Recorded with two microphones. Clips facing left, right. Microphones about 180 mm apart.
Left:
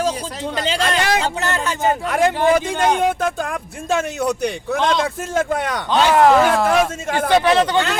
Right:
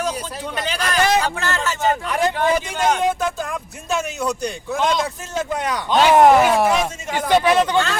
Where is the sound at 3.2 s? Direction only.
65° left (ahead or behind).